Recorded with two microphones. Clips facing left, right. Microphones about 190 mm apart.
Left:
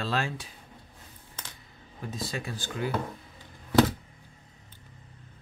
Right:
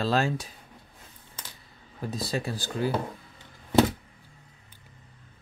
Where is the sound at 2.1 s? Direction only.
35° right (ahead or behind).